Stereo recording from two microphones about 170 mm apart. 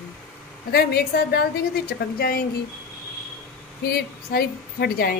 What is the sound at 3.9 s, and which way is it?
A woman's voice, 65° left (ahead or behind).